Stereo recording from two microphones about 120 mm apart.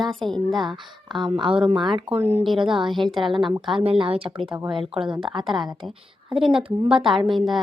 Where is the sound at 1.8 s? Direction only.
40° right (ahead or behind).